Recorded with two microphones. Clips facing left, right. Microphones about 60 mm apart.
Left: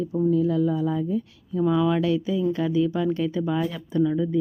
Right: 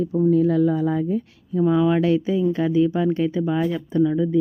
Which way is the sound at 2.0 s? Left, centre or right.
Right.